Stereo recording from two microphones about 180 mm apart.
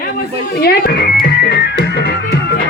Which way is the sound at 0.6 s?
60° left (ahead or behind).